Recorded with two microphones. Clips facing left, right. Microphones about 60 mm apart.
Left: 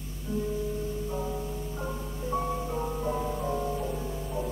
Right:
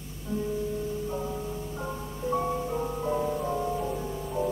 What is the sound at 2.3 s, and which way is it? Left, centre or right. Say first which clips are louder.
Music: right 2 dB; centre.